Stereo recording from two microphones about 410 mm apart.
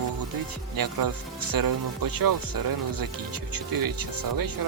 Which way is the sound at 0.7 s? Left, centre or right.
Right.